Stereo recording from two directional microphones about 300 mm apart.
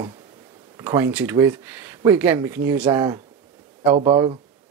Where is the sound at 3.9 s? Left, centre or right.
Centre.